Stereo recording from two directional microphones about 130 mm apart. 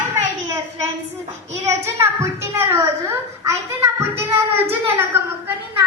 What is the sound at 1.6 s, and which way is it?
A woman's voice, 20° right (ahead or behind).